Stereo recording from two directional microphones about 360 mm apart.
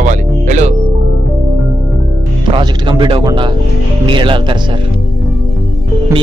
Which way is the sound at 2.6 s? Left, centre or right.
Centre.